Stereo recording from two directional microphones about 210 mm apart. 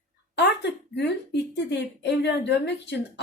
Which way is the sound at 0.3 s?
55° left (ahead or behind).